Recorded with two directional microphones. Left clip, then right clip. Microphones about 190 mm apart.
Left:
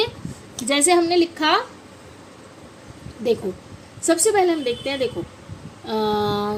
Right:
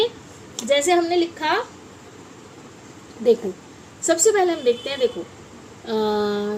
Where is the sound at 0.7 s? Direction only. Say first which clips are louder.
Even; 45° left (ahead or behind).